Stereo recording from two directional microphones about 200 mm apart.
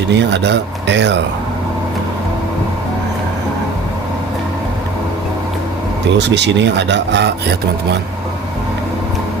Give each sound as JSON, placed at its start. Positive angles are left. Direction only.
{"t": 0.1, "sound": "speech", "side_deg": -60}
{"t": 6.1, "sound": "speech", "side_deg": -60}